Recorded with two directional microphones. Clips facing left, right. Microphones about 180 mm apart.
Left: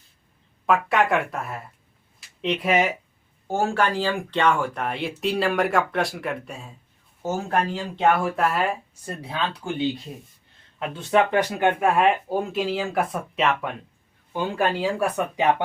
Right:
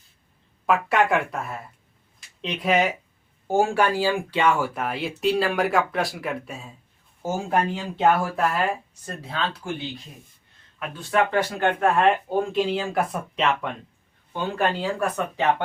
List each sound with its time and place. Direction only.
0.7 s speech: centre (ahead or behind)
3.4 s speech: 10° right (ahead or behind)
9.0 s speech: 15° left (ahead or behind)